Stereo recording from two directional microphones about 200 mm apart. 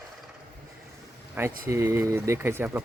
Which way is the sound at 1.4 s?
10° right (ahead or behind).